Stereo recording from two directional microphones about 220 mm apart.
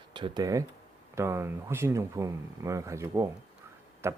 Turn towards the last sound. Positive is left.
turn(degrees=-10)  # may be behind; listen again after turning